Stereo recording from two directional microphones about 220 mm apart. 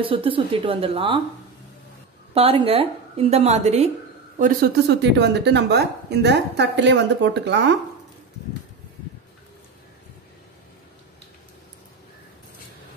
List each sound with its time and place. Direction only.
0.0 s a woman's voice: 25° right (ahead or behind)
2.3 s a woman's voice: 25° right (ahead or behind)
4.4 s a woman's voice: 40° right (ahead or behind)